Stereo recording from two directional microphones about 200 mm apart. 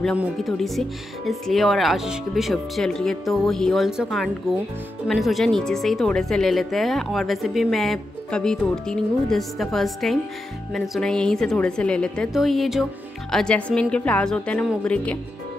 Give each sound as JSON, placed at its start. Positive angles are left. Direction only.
{"t": 0.2, "sound": "a woman's voice", "side_deg": 0}